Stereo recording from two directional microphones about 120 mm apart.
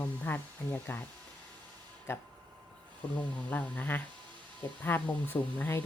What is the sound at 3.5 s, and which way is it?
Speech, 15° left (ahead or behind).